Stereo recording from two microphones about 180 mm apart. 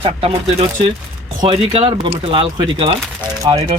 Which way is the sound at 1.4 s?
35° right (ahead or behind).